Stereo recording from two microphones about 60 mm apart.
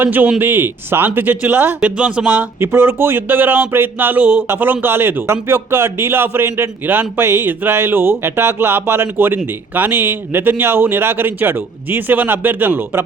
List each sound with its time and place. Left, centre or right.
0.0 s a man's voice: right
4.2 s speech: right
4.4 s a man's voice: right